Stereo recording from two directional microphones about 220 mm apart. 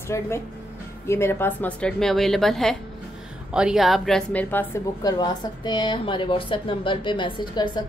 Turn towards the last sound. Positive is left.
turn(degrees=20)  # may be behind; listen again after turning